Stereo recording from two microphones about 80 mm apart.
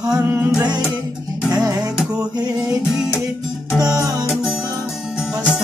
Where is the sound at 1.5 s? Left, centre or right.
Right.